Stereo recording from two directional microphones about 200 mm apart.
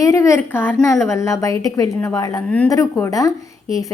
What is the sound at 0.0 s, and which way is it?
A woman's voice, 15° left (ahead or behind).